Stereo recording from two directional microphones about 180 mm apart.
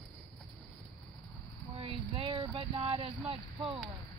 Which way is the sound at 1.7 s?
30° right (ahead or behind).